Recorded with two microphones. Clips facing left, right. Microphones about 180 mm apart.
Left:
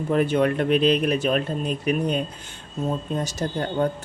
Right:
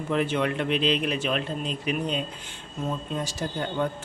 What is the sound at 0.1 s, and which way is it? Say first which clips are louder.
Speech: left 5 dB; 45° left (ahead or behind).